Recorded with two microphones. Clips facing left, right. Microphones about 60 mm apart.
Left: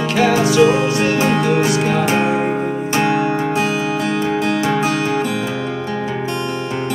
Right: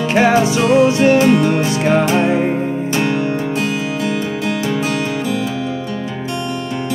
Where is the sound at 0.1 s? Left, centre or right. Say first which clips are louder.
Right 2 dB; right.